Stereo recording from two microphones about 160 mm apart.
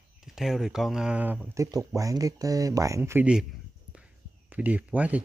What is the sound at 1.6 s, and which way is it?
Speech, 20° right (ahead or behind).